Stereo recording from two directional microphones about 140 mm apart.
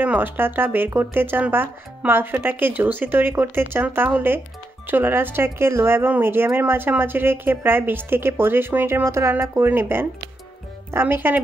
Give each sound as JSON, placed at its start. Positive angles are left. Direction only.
{"t": 0.0, "sound": "speech", "side_deg": -15}